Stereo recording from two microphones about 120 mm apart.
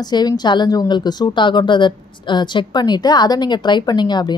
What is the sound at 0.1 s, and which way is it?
Speech, 35° left (ahead or behind).